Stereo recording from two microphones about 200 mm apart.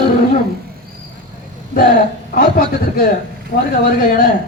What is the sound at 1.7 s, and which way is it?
Speech, 45° left (ahead or behind).